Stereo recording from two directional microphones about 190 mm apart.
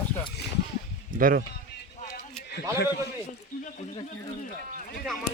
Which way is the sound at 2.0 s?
50° left (ahead or behind).